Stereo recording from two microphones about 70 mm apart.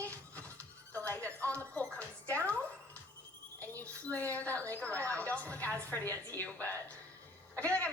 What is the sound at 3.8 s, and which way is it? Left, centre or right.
A woman's voice, left.